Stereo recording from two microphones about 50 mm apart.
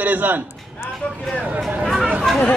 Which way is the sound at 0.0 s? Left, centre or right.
Right.